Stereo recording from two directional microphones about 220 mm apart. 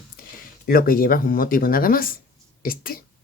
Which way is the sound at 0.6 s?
40° left (ahead or behind).